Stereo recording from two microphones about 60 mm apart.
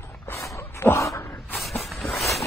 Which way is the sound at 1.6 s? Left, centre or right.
Centre.